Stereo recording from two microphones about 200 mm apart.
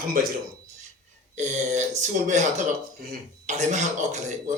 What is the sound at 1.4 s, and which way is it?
Speech, 35° right (ahead or behind).